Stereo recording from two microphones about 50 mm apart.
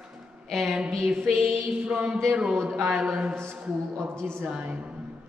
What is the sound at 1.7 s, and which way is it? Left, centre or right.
A man's voice, right.